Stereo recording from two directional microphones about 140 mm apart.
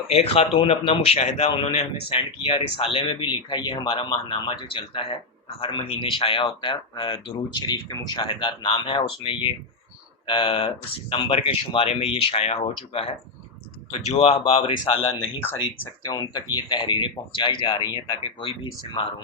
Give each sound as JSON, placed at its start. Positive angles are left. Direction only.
{"t": 0.1, "sound": "a man's voice", "side_deg": 50}
{"t": 16.0, "sound": "speech", "side_deg": 30}